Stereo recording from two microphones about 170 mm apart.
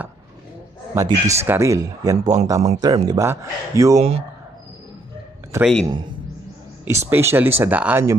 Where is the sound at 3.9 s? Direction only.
35° right (ahead or behind).